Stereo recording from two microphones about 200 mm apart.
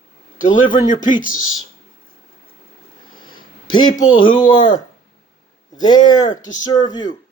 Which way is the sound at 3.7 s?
20° left (ahead or behind).